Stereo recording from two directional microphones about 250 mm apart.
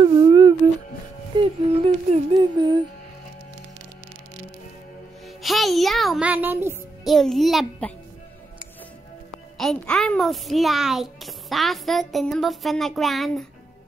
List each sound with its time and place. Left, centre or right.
0.0 s music: centre
1.4 s a sound: right
5.4 s a child's voice: centre
9.6 s a child's voice: centre